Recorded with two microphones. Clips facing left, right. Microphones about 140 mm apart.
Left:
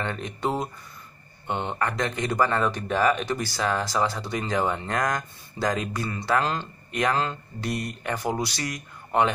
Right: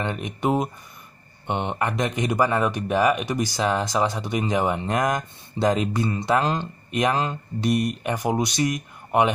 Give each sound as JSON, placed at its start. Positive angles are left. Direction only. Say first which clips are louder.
{"t": 0.0, "sound": "speech", "louder": "right 3 dB", "side_deg": -15}